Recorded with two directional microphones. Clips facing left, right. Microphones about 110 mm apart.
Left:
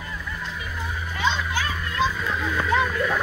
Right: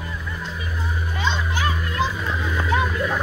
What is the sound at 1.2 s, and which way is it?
Children playing, 20° right (ahead or behind).